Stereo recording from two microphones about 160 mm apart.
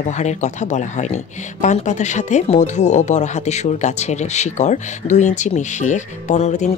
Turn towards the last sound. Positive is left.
turn(degrees=45)  # may be behind; listen again after turning